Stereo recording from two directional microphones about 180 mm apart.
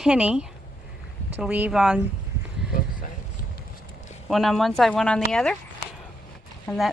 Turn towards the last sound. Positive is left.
turn(degrees=0)  # may be behind; listen again after turning